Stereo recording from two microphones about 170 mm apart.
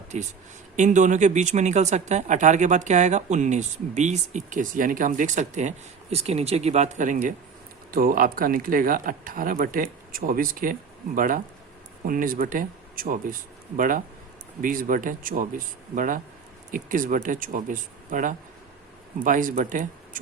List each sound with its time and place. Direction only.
0.1 s speech: 45° right (ahead or behind)